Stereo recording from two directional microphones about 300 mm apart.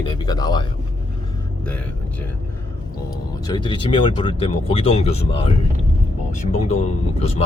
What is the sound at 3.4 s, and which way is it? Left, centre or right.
Speech, centre.